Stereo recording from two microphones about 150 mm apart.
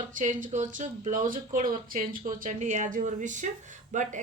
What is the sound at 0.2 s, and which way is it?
A woman's voice, 60° right (ahead or behind).